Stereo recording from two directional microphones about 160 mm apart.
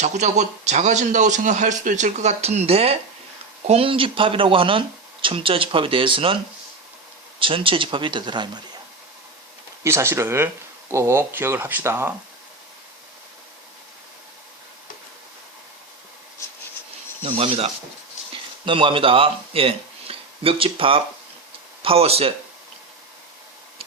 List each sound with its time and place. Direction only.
0.0 s a man's voice: 45° right (ahead or behind); by 8.6 s 30° right (ahead or behind)
9.8 s speech: 15° right (ahead or behind)
17.2 s speech: 35° right (ahead or behind)